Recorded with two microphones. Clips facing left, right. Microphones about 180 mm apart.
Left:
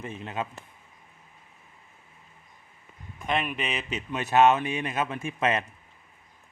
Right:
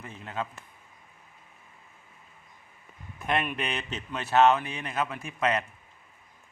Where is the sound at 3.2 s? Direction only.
Centre (ahead or behind).